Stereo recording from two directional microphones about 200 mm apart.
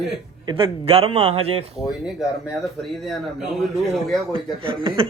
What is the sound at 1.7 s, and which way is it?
Speech, centre (ahead or behind).